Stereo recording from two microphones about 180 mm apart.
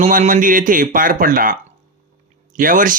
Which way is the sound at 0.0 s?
45° right (ahead or behind).